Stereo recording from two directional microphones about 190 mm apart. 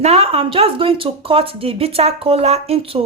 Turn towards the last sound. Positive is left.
turn(degrees=-30)  # may be behind; listen again after turning